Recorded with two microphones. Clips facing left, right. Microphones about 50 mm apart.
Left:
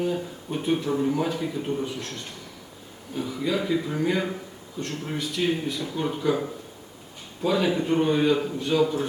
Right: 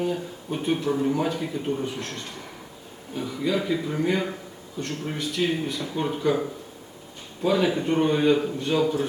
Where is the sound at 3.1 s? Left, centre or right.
Centre.